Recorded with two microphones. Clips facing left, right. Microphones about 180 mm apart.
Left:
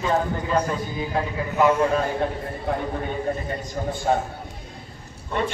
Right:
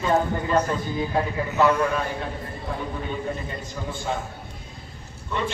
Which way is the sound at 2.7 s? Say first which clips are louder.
Left 6 dB; 65° left (ahead or behind).